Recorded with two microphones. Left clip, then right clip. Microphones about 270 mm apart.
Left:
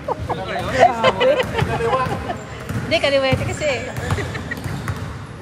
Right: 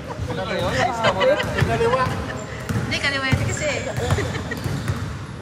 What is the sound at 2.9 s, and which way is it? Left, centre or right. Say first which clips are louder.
Speech: left 6 dB; centre.